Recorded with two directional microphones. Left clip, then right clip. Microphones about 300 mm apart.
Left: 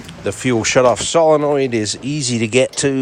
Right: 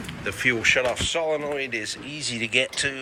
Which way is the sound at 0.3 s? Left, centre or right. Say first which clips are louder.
Left 3 dB; centre.